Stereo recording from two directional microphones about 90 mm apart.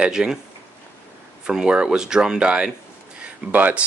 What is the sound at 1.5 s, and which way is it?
Speech, 10° right (ahead or behind).